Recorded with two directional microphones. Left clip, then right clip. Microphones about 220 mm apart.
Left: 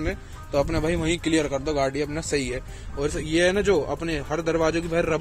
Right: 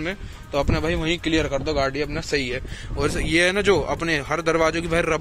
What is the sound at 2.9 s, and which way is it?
Speech, 5° right (ahead or behind).